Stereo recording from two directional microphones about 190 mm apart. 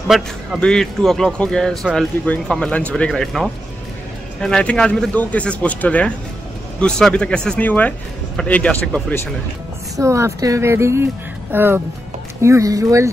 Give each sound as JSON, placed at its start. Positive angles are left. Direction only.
{"t": 0.1, "sound": "a man's voice", "side_deg": 0}
{"t": 9.9, "sound": "speech", "side_deg": -15}